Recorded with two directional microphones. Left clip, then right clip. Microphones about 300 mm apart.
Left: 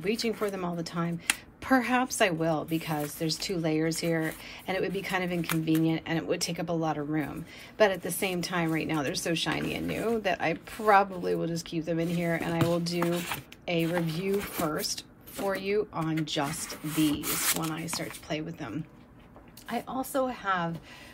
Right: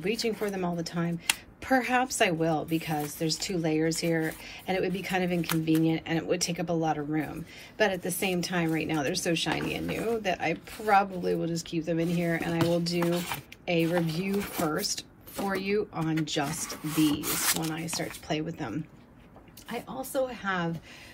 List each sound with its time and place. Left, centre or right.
0.0 s a woman's voice: centre
19.7 s a woman's voice: centre